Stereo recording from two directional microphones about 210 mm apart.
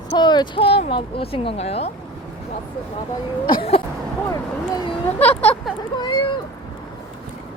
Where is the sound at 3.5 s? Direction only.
25° left (ahead or behind); by 5.5 s 10° left (ahead or behind).